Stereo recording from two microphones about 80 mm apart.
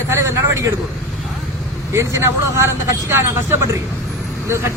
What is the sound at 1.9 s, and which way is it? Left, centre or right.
Speech, right.